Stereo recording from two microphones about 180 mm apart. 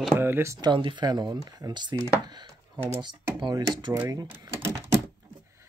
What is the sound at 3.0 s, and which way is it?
Speech, 25° right (ahead or behind).